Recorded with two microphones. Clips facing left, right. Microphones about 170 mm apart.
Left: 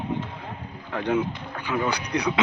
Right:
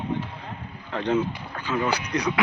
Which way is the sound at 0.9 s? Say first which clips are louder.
Even; 10° left (ahead or behind).